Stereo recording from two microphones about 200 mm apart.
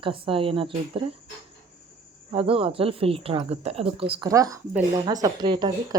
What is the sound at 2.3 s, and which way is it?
Speech, 30° right (ahead or behind).